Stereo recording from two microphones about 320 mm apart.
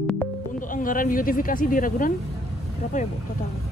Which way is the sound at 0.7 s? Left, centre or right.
Left.